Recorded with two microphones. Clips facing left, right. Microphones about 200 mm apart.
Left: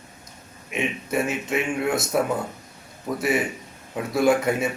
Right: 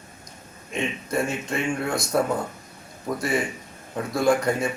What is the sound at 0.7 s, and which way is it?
A man's voice, 5° left (ahead or behind).